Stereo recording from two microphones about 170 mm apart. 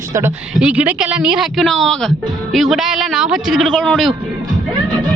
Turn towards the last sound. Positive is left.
turn(degrees=0)  # may be behind; listen again after turning